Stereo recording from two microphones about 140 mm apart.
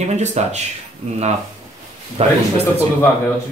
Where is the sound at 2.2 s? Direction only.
45° right (ahead or behind).